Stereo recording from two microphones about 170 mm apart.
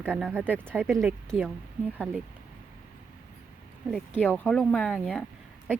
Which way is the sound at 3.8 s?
10° left (ahead or behind).